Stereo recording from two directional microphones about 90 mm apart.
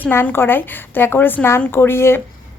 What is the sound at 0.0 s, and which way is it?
Speech, 25° left (ahead or behind).